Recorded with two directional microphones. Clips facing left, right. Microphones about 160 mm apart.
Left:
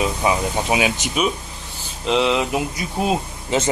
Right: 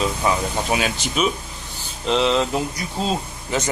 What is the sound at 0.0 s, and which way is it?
Speech, 10° left (ahead or behind).